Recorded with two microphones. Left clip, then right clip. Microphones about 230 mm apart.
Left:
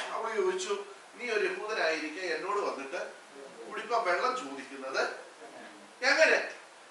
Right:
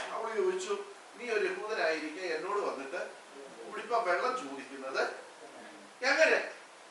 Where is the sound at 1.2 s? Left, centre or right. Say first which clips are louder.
Left 1 dB; centre.